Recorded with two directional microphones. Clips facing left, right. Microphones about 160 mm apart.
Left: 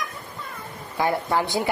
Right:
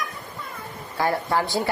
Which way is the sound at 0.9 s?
20° left (ahead or behind).